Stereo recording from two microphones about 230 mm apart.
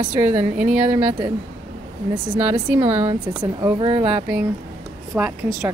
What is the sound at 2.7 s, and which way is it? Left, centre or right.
Speech, centre.